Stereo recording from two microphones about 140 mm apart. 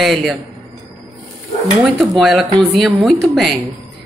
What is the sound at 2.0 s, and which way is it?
A woman's voice, centre (ahead or behind).